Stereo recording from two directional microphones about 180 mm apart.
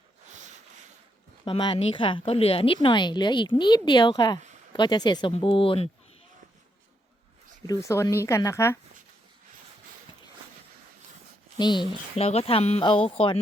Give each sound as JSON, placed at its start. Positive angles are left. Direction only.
{"t": 0.3, "sound": "a sound", "side_deg": -40}
{"t": 1.5, "sound": "a woman's voice", "side_deg": 30}
{"t": 7.7, "sound": "a woman's voice", "side_deg": 15}
{"t": 11.5, "sound": "speech", "side_deg": 25}